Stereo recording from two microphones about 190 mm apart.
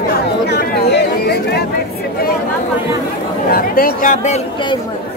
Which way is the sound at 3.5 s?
50° left (ahead or behind).